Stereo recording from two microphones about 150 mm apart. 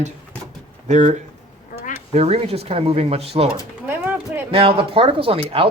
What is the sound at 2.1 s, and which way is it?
Speech, 40° right (ahead or behind).